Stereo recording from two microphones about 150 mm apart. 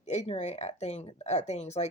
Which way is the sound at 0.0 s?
45° left (ahead or behind).